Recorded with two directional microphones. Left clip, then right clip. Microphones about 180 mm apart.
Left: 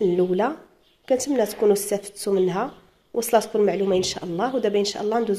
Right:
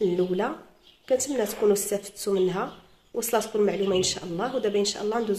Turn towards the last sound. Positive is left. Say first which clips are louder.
# left 3 dB
turn(degrees=30)  # may be behind; listen again after turning